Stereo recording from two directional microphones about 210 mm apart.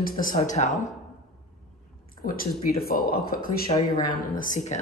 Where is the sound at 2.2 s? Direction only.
40° left (ahead or behind).